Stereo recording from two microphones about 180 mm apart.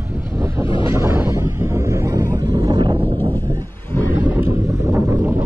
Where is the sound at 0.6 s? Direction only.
30° left (ahead or behind).